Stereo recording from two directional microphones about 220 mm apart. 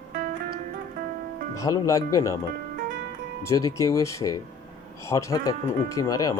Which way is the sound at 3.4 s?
15° left (ahead or behind).